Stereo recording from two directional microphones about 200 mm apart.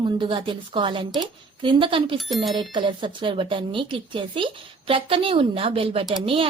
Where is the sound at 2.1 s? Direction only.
Centre (ahead or behind).